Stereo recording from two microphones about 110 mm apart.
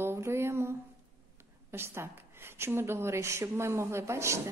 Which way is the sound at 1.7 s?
20° right (ahead or behind).